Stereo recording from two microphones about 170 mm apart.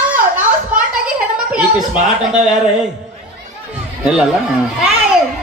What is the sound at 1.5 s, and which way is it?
A man's voice, 5° right (ahead or behind).